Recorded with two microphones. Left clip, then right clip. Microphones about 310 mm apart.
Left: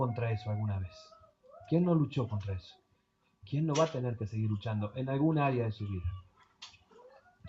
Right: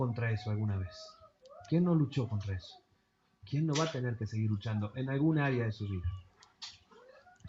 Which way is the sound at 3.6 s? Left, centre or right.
Left.